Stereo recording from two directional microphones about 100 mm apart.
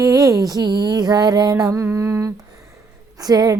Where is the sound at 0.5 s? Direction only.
45° right (ahead or behind).